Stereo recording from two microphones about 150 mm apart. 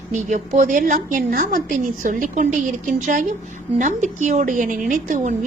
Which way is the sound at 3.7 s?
55° right (ahead or behind).